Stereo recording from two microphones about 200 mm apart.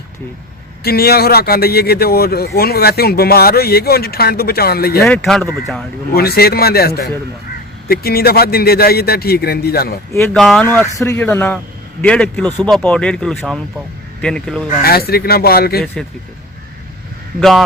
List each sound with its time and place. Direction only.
0.9 s speech: 50° left (ahead or behind)
5.0 s speech: centre (ahead or behind)
6.1 s speech: 50° left (ahead or behind)
10.3 s speech: centre (ahead or behind)
14.8 s speech: 50° left (ahead or behind)